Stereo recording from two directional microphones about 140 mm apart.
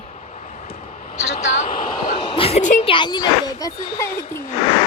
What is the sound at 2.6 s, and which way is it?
Speech, 60° left (ahead or behind).